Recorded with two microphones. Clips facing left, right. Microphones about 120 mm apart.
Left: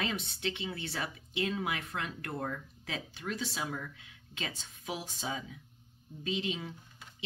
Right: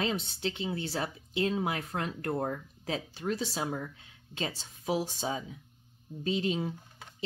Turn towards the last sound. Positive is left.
turn(degrees=-35)  # may be behind; listen again after turning